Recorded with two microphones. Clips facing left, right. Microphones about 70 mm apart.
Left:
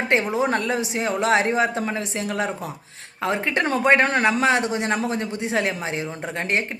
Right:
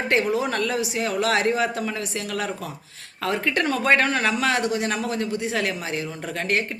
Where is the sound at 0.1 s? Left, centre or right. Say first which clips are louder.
Left 1 dB; left.